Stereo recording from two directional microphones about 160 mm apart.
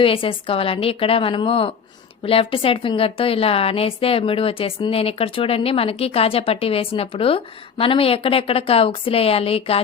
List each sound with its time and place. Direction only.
0.0 s a woman's voice: 35° left (ahead or behind)